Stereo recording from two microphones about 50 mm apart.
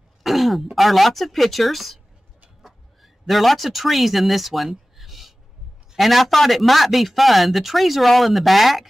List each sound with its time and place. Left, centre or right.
0.2 s throat clearing: centre
0.7 s speech: centre
2.6 s a sound: centre
5.9 s speech: centre